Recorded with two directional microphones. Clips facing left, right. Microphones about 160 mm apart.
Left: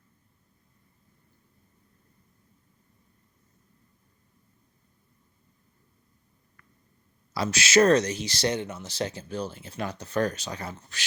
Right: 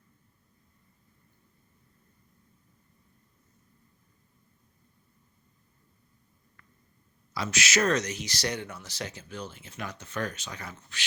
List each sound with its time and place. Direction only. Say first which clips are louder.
7.3 s speech: left 7 dB; 35° left (ahead or behind)